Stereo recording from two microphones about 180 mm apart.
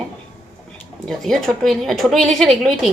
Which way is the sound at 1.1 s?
Centre (ahead or behind).